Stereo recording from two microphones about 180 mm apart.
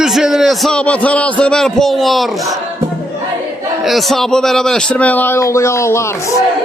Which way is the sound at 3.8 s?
Centre (ahead or behind).